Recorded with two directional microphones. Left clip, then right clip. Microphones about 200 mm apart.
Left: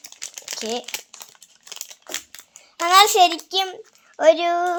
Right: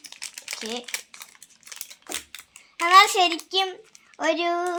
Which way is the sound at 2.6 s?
60° left (ahead or behind).